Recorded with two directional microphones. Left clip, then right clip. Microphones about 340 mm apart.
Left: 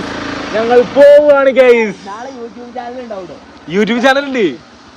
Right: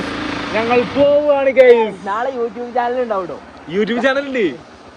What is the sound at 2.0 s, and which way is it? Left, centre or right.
Speech, right.